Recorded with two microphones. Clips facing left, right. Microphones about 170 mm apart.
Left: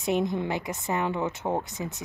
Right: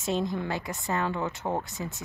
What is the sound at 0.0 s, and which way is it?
Speech, 20° left (ahead or behind).